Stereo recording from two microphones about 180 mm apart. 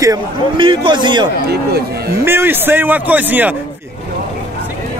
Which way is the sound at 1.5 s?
60° right (ahead or behind).